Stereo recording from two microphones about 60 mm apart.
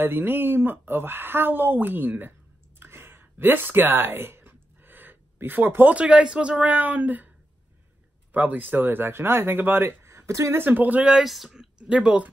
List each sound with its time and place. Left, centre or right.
0.0 s speech: right
2.8 s a sound: right
5.7 s speech: right
5.9 s a man's voice: centre
8.3 s speech: right
10.6 s speech: right
11.1 s speech: centre
11.9 s speech: centre